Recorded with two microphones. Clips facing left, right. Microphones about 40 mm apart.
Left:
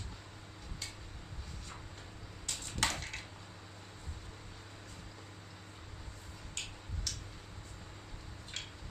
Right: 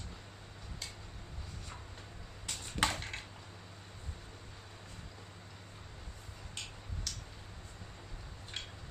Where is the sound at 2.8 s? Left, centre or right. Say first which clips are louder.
Right 2 dB; right.